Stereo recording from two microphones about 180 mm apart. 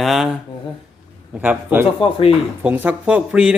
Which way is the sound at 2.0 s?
30° left (ahead or behind).